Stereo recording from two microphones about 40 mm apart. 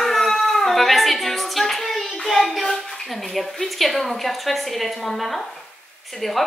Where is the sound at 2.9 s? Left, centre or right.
Centre.